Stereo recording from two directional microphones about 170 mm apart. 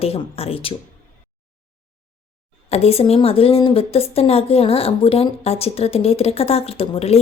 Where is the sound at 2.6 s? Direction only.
35° left (ahead or behind).